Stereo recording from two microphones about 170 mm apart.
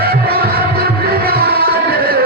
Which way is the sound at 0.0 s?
65° right (ahead or behind).